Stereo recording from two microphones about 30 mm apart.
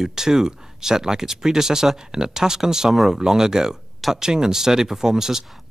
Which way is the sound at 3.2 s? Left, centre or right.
Centre.